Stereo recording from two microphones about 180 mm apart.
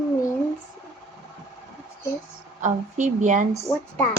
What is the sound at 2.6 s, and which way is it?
Speech, 40° right (ahead or behind).